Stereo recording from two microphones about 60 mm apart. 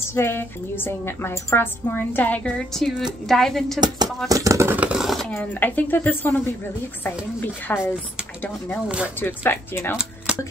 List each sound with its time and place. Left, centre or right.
0.1 s a woman's voice: left
2.4 s a woman's voice: centre
4.3 s speech: right
4.7 s a sound: centre
5.0 s a sound: centre
5.4 s a woman's voice: left
7.6 s a woman's voice: left
8.8 s speech: centre
9.2 s a woman's voice: left
9.9 s a sound: centre